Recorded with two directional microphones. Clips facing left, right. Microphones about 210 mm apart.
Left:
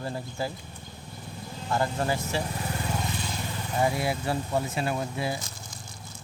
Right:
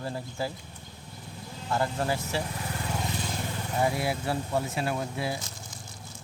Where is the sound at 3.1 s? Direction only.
50° right (ahead or behind).